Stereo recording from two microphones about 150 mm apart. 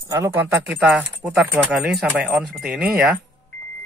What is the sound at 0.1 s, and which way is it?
Speech, 15° right (ahead or behind).